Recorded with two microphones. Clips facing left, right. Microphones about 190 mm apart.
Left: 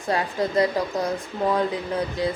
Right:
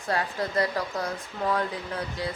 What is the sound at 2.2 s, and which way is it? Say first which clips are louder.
Speech: left 7 dB; 20° left (ahead or behind).